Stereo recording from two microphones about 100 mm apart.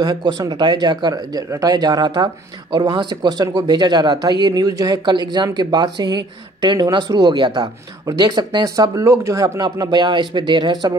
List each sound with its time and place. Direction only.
0.0 s speech: 45° right (ahead or behind)